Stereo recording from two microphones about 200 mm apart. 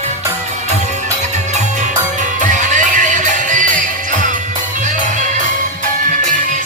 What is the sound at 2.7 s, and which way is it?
Music, 40° right (ahead or behind).